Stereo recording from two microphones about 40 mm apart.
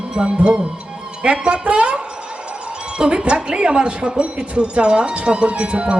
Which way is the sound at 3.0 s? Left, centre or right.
Right.